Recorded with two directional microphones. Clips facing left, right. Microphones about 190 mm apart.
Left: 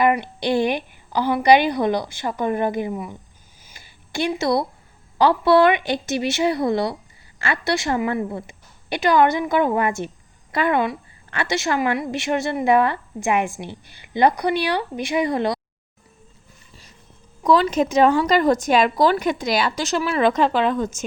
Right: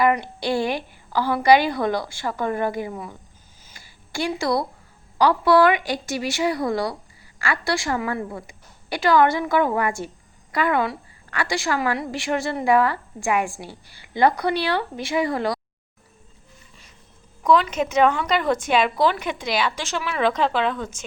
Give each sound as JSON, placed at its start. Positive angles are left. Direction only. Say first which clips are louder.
{"t": 0.0, "sound": "a woman's voice", "louder": "left 1 dB", "side_deg": 20}
{"t": 3.8, "sound": "a sound", "louder": "left 2 dB", "side_deg": 20}
{"t": 5.1, "sound": "a woman's voice", "louder": "left 1 dB", "side_deg": 25}
{"t": 17.4, "sound": "speech", "louder": "left 2 dB", "side_deg": 35}